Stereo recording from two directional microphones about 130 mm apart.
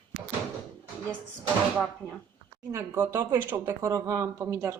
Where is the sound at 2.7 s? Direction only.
20° right (ahead or behind).